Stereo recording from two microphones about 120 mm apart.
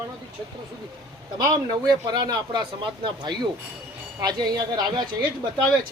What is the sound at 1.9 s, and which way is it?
Speech, 35° right (ahead or behind).